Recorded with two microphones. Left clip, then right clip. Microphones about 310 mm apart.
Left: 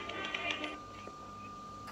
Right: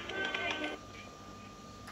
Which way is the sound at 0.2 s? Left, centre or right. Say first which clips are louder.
Right 3 dB; centre.